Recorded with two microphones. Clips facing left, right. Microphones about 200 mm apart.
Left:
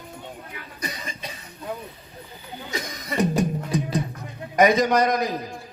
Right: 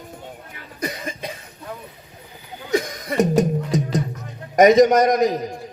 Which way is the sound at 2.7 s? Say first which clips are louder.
Right 8 dB; 50° right (ahead or behind).